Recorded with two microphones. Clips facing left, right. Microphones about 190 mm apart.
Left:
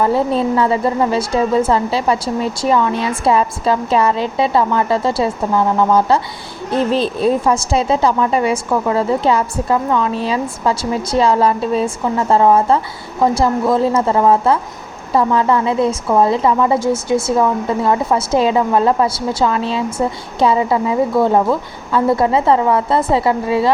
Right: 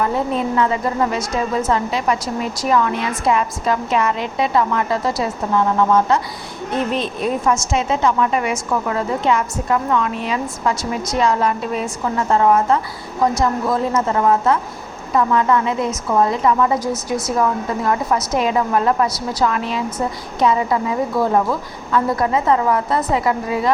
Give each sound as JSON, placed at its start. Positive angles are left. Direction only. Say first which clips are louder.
{"t": 0.0, "sound": "a woman's voice", "louder": "left 4 dB", "side_deg": 30}